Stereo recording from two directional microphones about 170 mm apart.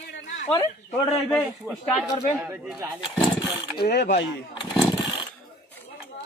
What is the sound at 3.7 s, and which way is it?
Speech, 70° left (ahead or behind).